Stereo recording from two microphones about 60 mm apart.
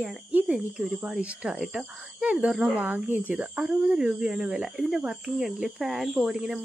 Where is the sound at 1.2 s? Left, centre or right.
Right.